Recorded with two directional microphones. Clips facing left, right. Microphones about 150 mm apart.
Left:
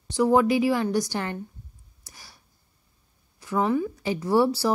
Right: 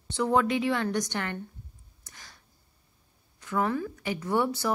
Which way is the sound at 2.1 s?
10° left (ahead or behind).